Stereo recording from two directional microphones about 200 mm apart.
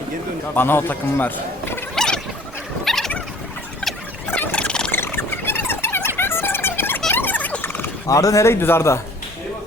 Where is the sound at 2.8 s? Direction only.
Centre (ahead or behind).